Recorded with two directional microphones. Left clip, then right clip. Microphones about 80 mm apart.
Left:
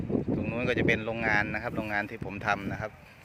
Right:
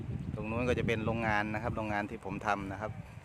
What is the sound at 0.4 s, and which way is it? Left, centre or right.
Speech, right.